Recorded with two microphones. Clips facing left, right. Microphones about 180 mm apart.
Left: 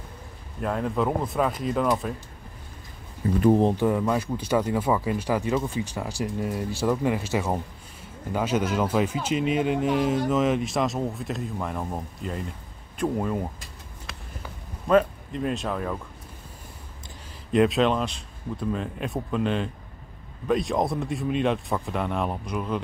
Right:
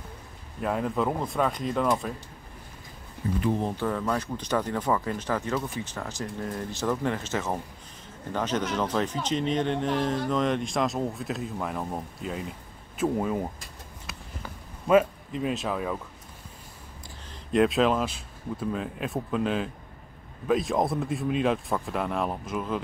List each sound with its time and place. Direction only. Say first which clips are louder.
0.6 s speech: left 1 dB; centre (ahead or behind)
3.3 s speech: left 8 dB; 45° left (ahead or behind)
3.7 s speech: left 5 dB; 15° left (ahead or behind); by 13.5 s 5° right (ahead or behind)
14.9 s speech: even; 5° right (ahead or behind)
17.5 s speech: left 1 dB; centre (ahead or behind)